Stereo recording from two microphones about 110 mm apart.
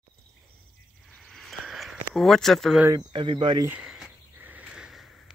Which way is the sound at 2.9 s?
45° right (ahead or behind).